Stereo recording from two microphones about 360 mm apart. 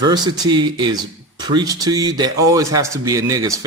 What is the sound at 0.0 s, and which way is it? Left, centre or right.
A man's voice, centre.